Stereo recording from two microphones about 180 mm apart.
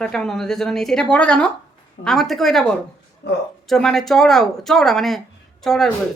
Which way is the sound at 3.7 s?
Centre (ahead or behind).